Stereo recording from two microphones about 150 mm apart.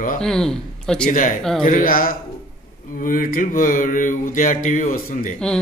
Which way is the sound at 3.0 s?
65° left (ahead or behind).